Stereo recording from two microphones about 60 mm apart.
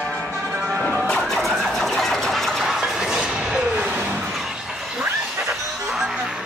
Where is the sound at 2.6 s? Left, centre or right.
Centre.